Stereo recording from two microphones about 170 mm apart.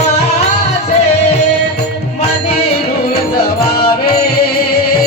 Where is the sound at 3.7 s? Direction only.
65° left (ahead or behind).